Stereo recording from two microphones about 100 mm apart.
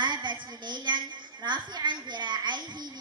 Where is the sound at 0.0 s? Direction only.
50° right (ahead or behind).